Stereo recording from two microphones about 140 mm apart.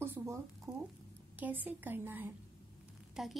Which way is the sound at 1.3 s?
15° right (ahead or behind).